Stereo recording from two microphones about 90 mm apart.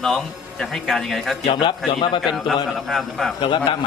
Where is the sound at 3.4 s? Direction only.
65° left (ahead or behind).